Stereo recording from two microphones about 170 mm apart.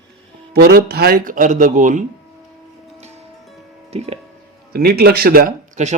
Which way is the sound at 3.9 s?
40° right (ahead or behind).